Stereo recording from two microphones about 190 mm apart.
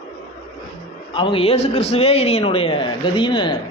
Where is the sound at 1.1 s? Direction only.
25° left (ahead or behind).